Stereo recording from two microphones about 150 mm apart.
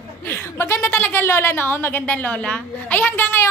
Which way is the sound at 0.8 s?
10° left (ahead or behind).